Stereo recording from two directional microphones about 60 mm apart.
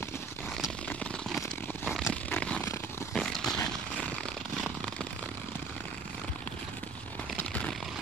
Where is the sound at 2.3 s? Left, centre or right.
Left.